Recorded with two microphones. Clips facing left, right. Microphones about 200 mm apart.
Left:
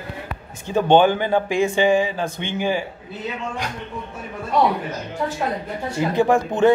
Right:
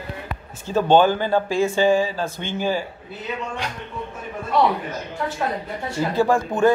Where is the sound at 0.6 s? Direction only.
15° left (ahead or behind).